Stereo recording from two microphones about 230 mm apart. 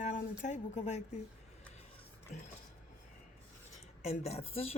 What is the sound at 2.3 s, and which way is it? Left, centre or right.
Speech, left.